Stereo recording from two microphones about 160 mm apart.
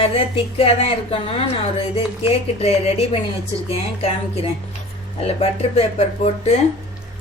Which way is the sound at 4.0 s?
40° left (ahead or behind).